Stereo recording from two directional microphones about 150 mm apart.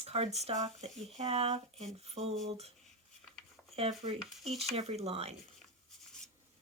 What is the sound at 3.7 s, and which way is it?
Speech, 40° right (ahead or behind).